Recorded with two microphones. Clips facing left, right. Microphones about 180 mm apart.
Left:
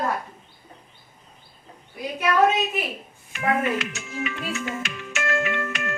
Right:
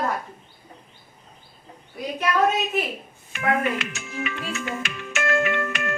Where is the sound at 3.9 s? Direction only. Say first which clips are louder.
Even; 55° right (ahead or behind).